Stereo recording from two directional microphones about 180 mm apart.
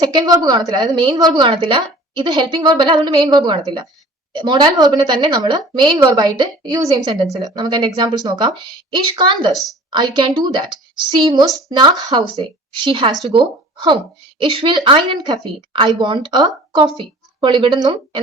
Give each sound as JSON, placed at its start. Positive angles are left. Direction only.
{"t": 0.0, "sound": "a woman's voice", "side_deg": -20}
{"t": 9.5, "sound": "a woman's voice", "side_deg": 0}
{"t": 9.9, "sound": "a woman's voice", "side_deg": -25}